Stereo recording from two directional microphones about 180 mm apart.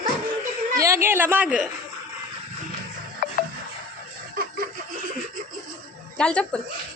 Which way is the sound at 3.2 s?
50° left (ahead or behind).